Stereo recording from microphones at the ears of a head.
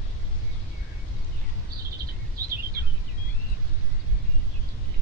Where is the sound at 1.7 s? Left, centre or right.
Right.